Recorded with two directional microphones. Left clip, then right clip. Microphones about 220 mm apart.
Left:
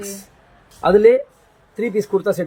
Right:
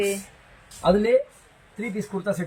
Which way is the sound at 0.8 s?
10° left (ahead or behind).